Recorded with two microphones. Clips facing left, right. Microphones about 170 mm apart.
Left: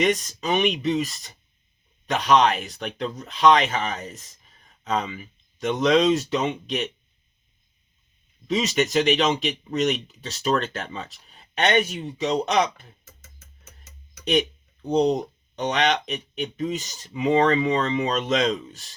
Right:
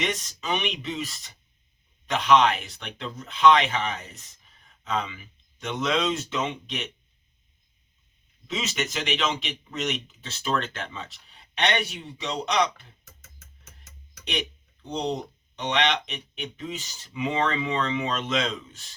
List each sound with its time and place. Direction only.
0.0 s speech: 45° left (ahead or behind)
8.4 s speech: 40° left (ahead or behind)
14.3 s speech: 40° left (ahead or behind)